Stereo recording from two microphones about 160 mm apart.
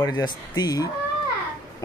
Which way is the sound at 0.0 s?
25° left (ahead or behind).